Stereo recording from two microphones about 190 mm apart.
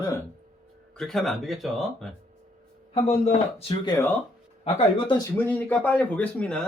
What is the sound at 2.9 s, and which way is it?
Speech, 35° left (ahead or behind).